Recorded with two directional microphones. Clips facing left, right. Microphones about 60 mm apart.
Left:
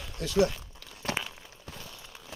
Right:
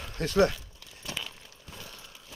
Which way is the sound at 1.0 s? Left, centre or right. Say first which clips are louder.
Left 6 dB; left.